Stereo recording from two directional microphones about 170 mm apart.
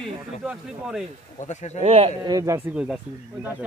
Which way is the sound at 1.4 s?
45° left (ahead or behind).